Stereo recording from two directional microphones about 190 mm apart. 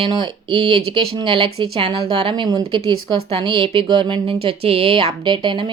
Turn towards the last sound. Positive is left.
turn(degrees=-25)  # may be behind; listen again after turning